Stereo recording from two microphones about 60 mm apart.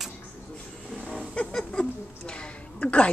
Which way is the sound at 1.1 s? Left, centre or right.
Centre.